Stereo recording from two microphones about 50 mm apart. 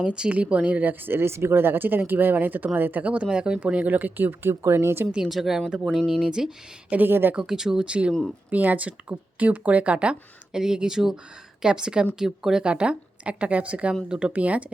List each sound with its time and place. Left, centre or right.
0.0 s speech: right
1.2 s speech: right
3.0 s speech: right
4.6 s speech: right
5.3 s speech: centre
6.1 s speech: centre
6.9 s speech: right
7.3 s speech: centre
7.9 s speech: right
8.4 s speech: right
10.6 s speech: centre; by 14.6 s right